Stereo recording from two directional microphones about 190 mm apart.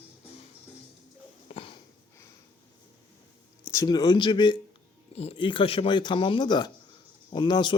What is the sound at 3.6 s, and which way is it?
A man's voice, 15° left (ahead or behind).